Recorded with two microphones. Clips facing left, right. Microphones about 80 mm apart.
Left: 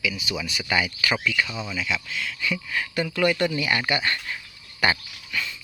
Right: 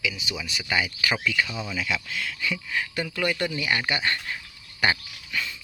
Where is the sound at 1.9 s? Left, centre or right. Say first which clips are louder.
Left 1 dB; right.